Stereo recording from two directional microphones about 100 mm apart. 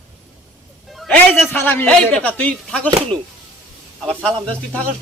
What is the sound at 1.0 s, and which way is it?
Speech, centre (ahead or behind).